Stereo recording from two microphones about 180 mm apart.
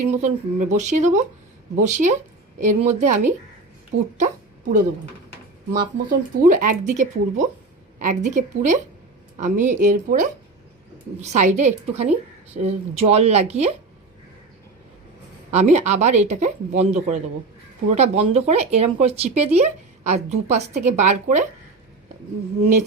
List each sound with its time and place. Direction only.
0.0 s speech: 40° right (ahead or behind)
5.7 s speech: 50° right (ahead or behind)
15.5 s speech: 40° right (ahead or behind)
22.6 s speech: 40° right (ahead or behind)